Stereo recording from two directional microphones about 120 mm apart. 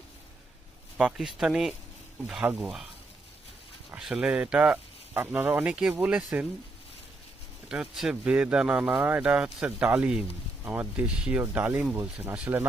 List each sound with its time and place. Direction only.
0.9 s speech: 5° right (ahead or behind)
3.9 s speech: 5° right (ahead or behind)
7.7 s speech: 5° right (ahead or behind)